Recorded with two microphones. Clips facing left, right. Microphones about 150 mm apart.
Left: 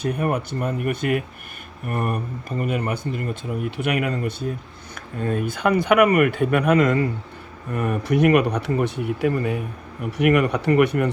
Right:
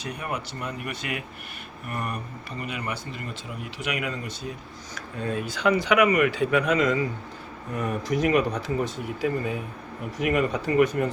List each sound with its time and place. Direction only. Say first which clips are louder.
0.0 s speech: left 9 dB; 50° left (ahead or behind); by 11.1 s 65° left (ahead or behind)